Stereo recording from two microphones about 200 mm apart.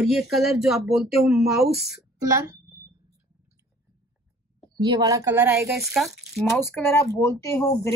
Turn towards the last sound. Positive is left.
turn(degrees=15)  # may be behind; listen again after turning